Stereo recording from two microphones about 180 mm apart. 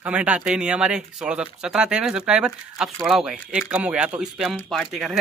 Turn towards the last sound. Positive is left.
turn(degrees=0)  # may be behind; listen again after turning